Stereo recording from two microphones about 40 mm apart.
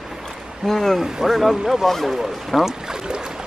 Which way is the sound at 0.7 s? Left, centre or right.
Centre.